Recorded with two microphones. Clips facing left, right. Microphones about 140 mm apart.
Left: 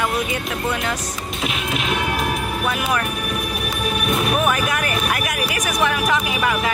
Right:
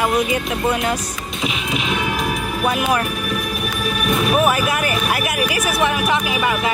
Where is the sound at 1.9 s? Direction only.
50° left (ahead or behind).